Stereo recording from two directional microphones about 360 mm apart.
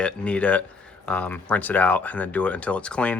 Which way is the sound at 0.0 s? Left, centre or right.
Centre.